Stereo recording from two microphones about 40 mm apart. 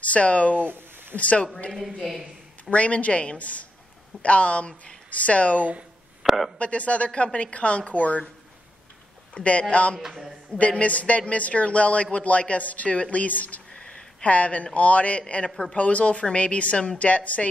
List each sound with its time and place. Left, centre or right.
0.0 s speech: left
0.7 s a sound: right
1.1 s speech: left
2.0 s a sound: centre
2.7 s speech: left
6.2 s a sound: centre
6.6 s speech: left
9.3 s speech: left
9.9 s a man's voice: centre
10.8 s a man's voice: left
15.8 s speech: left